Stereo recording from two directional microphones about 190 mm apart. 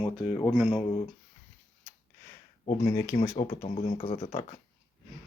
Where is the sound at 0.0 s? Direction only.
25° left (ahead or behind).